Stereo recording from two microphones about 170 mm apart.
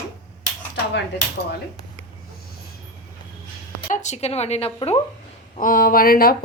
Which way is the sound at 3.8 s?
45° left (ahead or behind).